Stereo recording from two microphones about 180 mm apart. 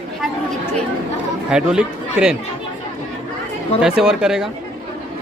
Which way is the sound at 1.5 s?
5° right (ahead or behind).